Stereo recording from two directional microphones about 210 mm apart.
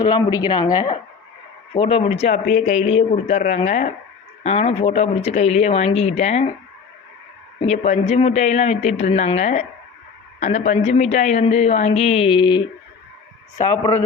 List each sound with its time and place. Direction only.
0.0 s a woman's voice: 20° left (ahead or behind)
7.7 s a woman's voice: 30° left (ahead or behind)